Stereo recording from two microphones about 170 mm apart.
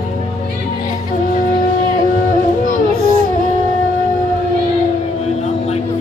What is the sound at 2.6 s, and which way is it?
Music, 60° left (ahead or behind).